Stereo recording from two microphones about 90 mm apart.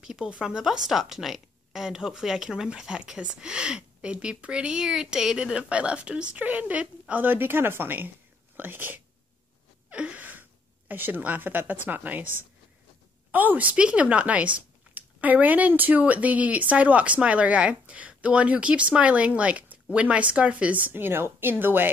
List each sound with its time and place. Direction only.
0.0 s a woman's voice: 10° right (ahead or behind)
9.8 s gasp: 15° right (ahead or behind)
10.9 s a woman's voice: 20° right (ahead or behind)